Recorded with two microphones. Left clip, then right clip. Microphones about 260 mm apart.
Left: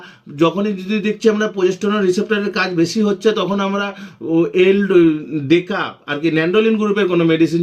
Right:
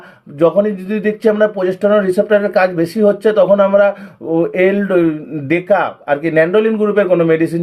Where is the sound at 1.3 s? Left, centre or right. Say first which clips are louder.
Right 3 dB; left.